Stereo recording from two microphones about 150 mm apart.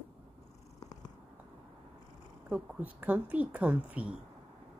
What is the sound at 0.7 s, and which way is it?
Purr, 25° left (ahead or behind).